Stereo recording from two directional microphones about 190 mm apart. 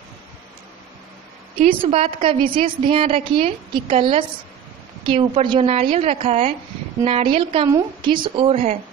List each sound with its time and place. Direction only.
1.6 s a woman's voice: 30° right (ahead or behind)